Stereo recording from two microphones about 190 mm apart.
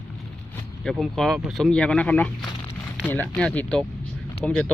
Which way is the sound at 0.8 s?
Centre (ahead or behind).